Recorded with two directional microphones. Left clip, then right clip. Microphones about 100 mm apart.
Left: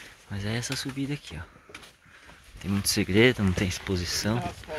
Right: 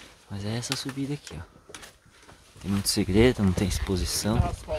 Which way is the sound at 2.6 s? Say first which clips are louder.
Even; 10° right (ahead or behind).